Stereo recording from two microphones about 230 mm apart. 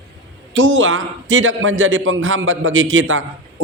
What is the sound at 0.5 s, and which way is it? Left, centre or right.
A man's voice, right.